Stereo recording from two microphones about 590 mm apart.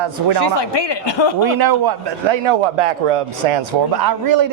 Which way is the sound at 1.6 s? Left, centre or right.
Right.